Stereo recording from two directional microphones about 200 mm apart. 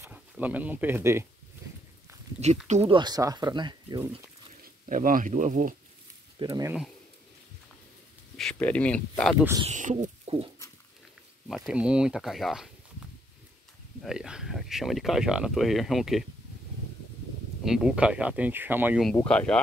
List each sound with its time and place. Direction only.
0.0 s speech: 10° right (ahead or behind)
2.4 s speech: 30° right (ahead or behind)
4.8 s speech: 40° right (ahead or behind)
6.4 s speech: 20° right (ahead or behind)
8.4 s speech: 5° left (ahead or behind)
9.7 s speech: 40° right (ahead or behind)
10.0 s pig: 30° right (ahead or behind)
11.4 s speech: centre (ahead or behind)
17.6 s speech: 5° right (ahead or behind)
19.0 s speech: 5° left (ahead or behind)